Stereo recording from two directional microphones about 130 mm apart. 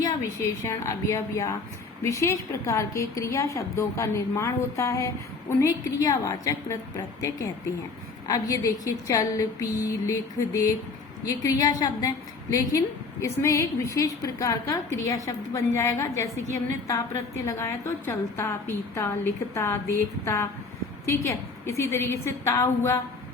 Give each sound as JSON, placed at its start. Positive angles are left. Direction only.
{"t": 0.0, "sound": "a woman's voice", "side_deg": 20}